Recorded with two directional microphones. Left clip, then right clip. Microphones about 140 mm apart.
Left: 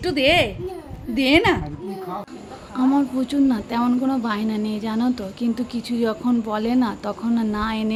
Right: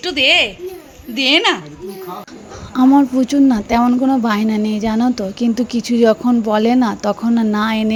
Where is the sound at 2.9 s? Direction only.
35° right (ahead or behind).